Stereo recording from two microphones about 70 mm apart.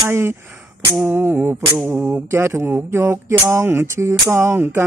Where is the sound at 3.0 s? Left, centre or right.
Right.